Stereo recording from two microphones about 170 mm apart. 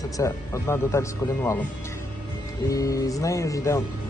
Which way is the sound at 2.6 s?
20° left (ahead or behind).